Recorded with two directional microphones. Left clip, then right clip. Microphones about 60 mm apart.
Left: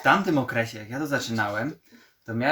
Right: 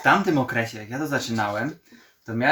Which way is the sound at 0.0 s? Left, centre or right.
Left.